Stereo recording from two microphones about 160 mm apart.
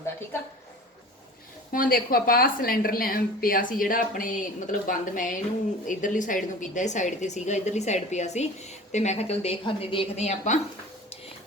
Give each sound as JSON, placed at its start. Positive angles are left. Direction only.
{"t": 1.7, "sound": "a woman's voice", "side_deg": 60}